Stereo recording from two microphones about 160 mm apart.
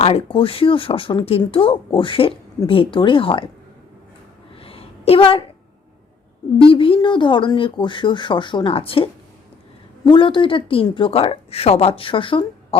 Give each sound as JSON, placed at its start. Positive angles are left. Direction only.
{"t": 0.0, "sound": "speech", "side_deg": 35}
{"t": 4.5, "sound": "a sound", "side_deg": 35}
{"t": 6.6, "sound": "speech", "side_deg": 35}